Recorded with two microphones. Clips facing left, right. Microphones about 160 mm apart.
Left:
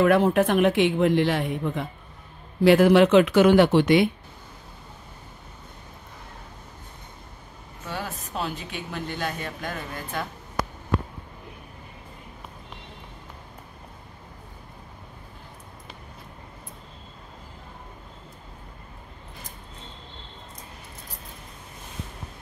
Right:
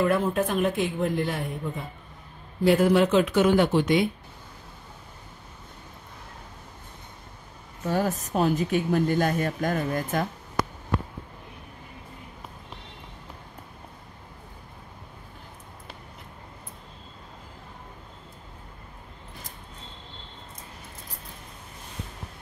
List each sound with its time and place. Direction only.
0.0 s speech: 75° left (ahead or behind)
7.8 s speech: 40° right (ahead or behind)